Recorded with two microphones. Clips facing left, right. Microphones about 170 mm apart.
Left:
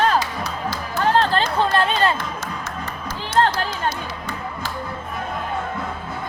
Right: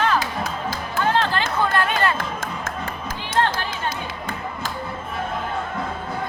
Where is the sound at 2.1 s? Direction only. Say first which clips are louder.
Right 1 dB; 50° right (ahead or behind).